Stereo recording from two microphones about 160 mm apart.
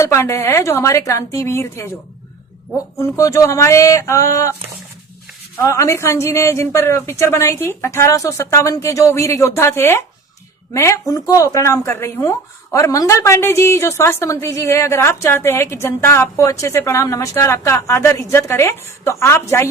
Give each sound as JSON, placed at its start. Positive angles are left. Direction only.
{"t": 0.0, "sound": "speech", "side_deg": 15}
{"t": 3.0, "sound": "speech", "side_deg": 20}
{"t": 5.6, "sound": "speech", "side_deg": 20}